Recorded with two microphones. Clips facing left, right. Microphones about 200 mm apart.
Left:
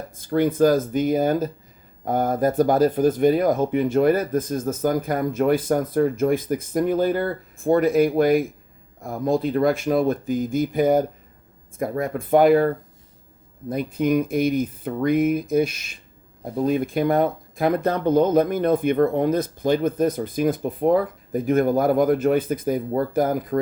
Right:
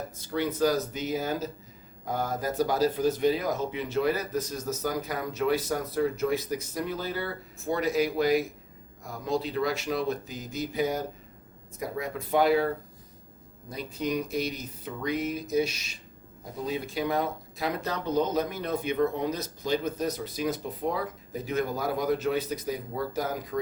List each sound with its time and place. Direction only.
0.2 s speech: 50° left (ahead or behind)